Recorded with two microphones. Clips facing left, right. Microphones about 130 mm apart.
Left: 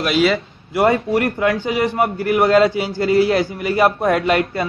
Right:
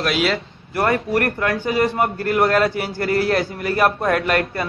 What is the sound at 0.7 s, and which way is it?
A man's voice, 25° left (ahead or behind).